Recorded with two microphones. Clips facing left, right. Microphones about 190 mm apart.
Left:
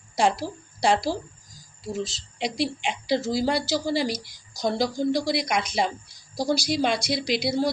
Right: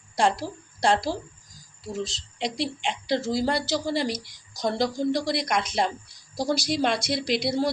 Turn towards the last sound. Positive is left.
turn(degrees=0)  # may be behind; listen again after turning